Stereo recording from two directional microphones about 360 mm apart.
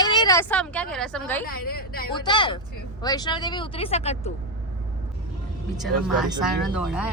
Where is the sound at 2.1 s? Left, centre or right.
Centre.